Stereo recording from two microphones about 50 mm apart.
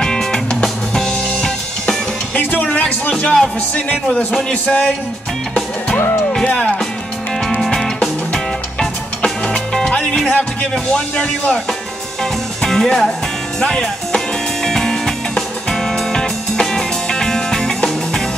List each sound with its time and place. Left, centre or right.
0.0 s music: centre
2.6 s music: left
4.6 s music: left
6.4 s music: left
7.6 s music: centre
12.6 s music: centre